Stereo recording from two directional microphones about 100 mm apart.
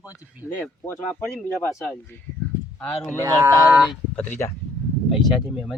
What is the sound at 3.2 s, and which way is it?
Speech, 30° right (ahead or behind).